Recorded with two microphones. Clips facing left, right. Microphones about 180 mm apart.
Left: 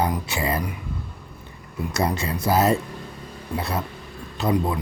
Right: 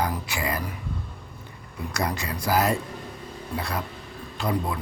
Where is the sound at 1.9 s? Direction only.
25° left (ahead or behind).